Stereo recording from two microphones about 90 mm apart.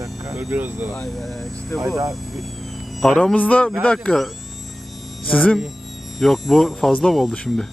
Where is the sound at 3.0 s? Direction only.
10° left (ahead or behind).